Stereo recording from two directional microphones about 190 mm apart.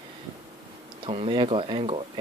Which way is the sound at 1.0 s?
30° right (ahead or behind).